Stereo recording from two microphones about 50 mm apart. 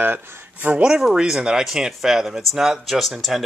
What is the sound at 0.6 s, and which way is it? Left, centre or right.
Speech, right.